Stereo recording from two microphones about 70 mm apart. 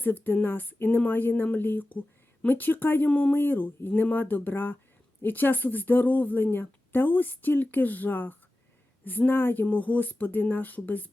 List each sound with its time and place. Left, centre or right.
0.0 s speech: left